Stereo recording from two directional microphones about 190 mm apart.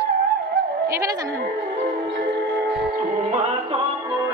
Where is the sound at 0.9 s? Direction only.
20° right (ahead or behind).